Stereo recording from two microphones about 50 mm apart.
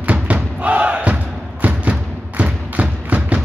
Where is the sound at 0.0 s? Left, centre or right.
Right.